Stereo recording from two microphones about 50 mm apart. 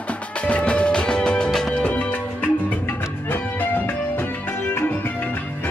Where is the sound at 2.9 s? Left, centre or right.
Left.